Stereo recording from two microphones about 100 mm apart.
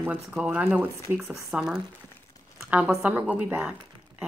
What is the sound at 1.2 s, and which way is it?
Speech, 30° right (ahead or behind).